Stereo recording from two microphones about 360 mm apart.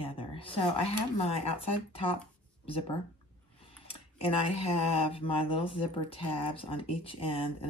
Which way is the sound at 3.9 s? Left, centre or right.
Centre.